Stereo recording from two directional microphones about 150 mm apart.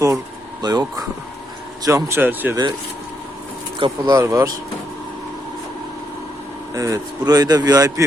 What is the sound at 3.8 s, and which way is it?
Speech, 30° right (ahead or behind).